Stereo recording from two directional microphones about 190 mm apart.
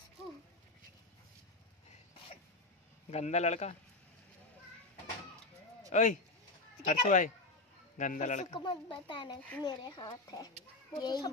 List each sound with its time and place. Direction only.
3.1 s a man's voice: 35° left (ahead or behind)
5.9 s a man's voice: 40° left (ahead or behind)
8.5 s speech: 25° left (ahead or behind)